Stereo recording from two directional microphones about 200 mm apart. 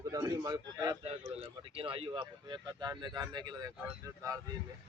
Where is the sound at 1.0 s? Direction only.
30° right (ahead or behind).